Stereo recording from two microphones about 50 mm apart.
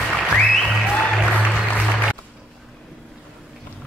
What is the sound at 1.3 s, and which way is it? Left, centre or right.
Music, left.